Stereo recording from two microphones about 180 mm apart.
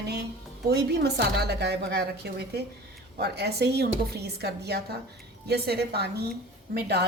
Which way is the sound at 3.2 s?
65° right (ahead or behind).